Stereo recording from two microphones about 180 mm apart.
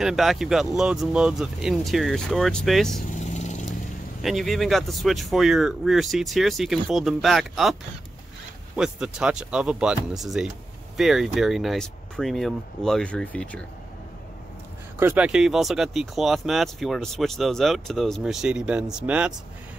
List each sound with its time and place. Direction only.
0.0 s speech: centre (ahead or behind)
3.3 s vehicle: 40° left (ahead or behind)
4.2 s speech: centre (ahead or behind)
8.7 s speech: 5° right (ahead or behind)
15.0 s speech: 10° right (ahead or behind)